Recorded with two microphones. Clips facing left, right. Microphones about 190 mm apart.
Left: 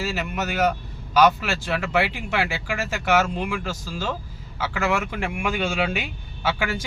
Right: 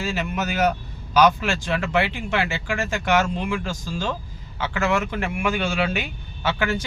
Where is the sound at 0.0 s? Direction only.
Centre (ahead or behind).